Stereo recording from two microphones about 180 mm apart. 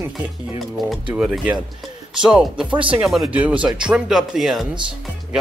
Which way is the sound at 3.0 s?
5° right (ahead or behind).